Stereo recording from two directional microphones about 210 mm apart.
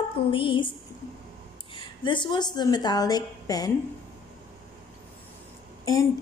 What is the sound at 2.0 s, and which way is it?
Speech, 20° left (ahead or behind).